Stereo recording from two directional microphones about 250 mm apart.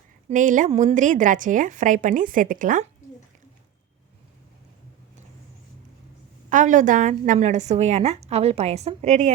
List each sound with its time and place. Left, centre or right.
0.3 s a woman's voice: right
6.5 s a woman's voice: right